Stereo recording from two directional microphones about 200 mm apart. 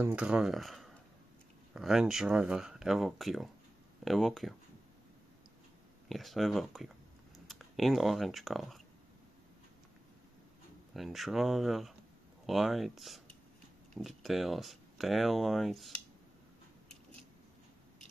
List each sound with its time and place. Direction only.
0.0 s speech: 5° right (ahead or behind)
6.0 s speech: centre (ahead or behind)
10.9 s speech: centre (ahead or behind)